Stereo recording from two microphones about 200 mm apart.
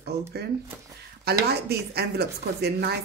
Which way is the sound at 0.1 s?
55° right (ahead or behind).